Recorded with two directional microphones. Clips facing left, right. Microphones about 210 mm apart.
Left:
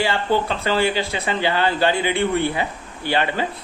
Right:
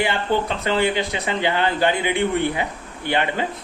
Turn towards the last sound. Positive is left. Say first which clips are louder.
# left 1 dB
turn(degrees=-20)  # may be behind; listen again after turning